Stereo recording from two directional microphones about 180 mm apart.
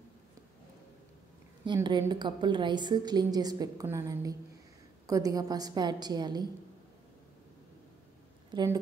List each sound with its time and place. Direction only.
1.7 s a woman's voice: 25° right (ahead or behind)